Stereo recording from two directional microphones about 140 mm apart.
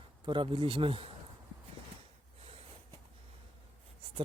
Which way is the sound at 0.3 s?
35° right (ahead or behind).